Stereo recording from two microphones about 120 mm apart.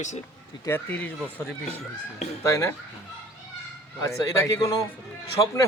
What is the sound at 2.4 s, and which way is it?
Speech, 25° left (ahead or behind).